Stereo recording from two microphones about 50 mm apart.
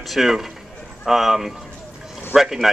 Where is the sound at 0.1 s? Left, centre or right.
Centre.